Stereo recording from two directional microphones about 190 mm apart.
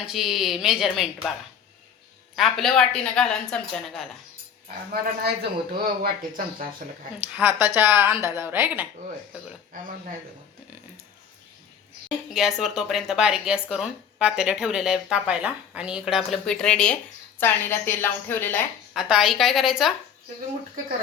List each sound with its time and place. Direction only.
0.0 s speech: centre (ahead or behind)
2.3 s speech: centre (ahead or behind)
4.9 s speech: 55° right (ahead or behind)
7.3 s a woman's voice: 10° right (ahead or behind)
12.3 s speech: centre (ahead or behind)
18.9 s speech: 5° right (ahead or behind)